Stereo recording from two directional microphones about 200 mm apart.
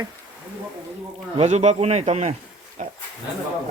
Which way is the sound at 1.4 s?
35° right (ahead or behind).